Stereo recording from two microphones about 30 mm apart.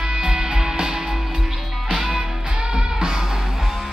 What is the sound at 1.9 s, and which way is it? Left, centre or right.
Music, centre.